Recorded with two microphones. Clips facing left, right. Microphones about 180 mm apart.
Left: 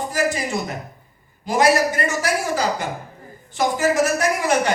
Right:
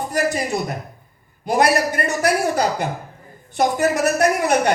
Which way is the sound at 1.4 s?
60° right (ahead or behind).